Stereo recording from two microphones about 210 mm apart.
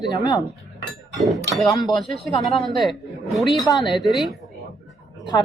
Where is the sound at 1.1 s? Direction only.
Centre (ahead or behind).